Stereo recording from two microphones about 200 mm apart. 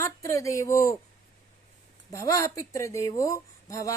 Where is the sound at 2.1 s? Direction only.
15° left (ahead or behind).